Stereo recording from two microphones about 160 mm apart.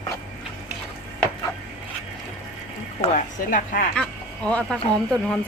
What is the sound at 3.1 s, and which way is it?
Speech, 60° left (ahead or behind).